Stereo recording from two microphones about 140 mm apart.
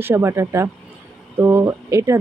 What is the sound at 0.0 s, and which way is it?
Speech, 20° right (ahead or behind).